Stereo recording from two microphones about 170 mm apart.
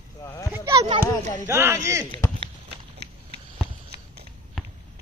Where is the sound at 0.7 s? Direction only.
35° right (ahead or behind).